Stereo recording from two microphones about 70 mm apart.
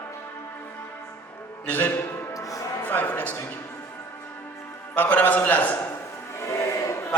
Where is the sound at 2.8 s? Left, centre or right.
Left.